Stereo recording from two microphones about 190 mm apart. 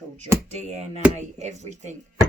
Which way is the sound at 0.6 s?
35° right (ahead or behind).